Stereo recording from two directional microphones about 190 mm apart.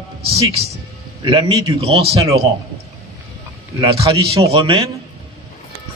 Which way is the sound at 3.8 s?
30° right (ahead or behind).